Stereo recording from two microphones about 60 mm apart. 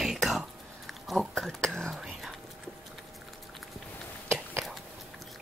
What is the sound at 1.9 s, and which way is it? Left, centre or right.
Whispering, centre.